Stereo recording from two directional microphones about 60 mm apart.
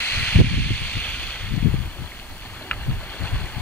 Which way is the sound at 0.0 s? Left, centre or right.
Left.